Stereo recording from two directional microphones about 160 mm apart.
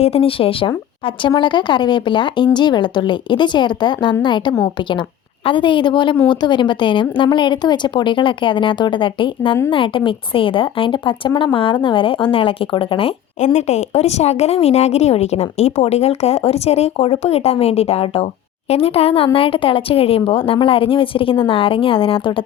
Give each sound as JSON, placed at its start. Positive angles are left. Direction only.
{"t": 0.0, "sound": "a woman's voice", "side_deg": 35}